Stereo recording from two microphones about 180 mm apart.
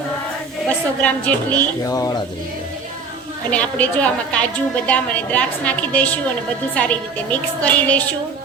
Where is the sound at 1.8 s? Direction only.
20° left (ahead or behind).